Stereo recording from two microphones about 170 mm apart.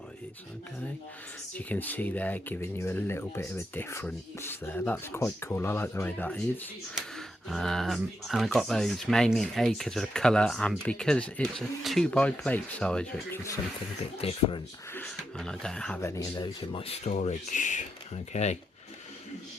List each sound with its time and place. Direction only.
1.5 s speech: 10° left (ahead or behind)
14.2 s speech: 35° left (ahead or behind)
14.9 s speech: 5° left (ahead or behind)
16.0 s speech: 20° left (ahead or behind); by 17.2 s 35° left (ahead or behind)
17.2 s speech: 50° left (ahead or behind)